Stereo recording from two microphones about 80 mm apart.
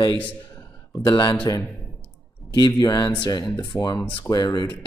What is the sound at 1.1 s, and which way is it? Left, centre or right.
Speech, left.